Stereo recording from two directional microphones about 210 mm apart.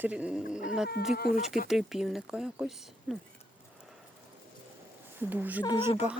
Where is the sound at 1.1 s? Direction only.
45° left (ahead or behind).